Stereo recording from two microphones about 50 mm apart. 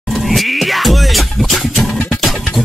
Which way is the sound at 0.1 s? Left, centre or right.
Centre.